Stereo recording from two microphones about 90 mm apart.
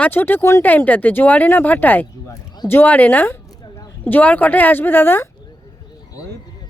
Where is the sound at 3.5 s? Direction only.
45° left (ahead or behind).